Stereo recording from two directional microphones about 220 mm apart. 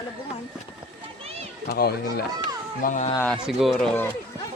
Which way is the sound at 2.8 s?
35° left (ahead or behind).